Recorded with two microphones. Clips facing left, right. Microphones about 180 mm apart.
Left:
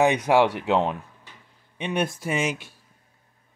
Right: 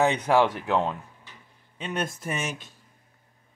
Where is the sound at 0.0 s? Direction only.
15° left (ahead or behind).